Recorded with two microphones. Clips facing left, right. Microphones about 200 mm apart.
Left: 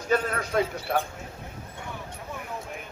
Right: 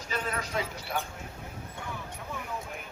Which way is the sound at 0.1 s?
55° left (ahead or behind).